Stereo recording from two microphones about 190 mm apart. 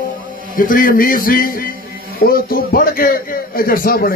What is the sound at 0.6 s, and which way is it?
A man's voice, 45° left (ahead or behind).